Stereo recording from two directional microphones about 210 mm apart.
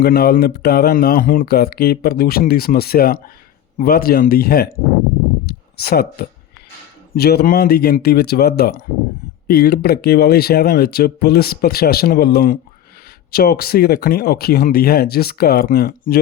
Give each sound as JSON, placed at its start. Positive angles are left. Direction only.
{"t": 0.0, "sound": "speech", "side_deg": 45}
{"t": 5.5, "sound": "a sound", "side_deg": 50}
{"t": 7.1, "sound": "speech", "side_deg": 50}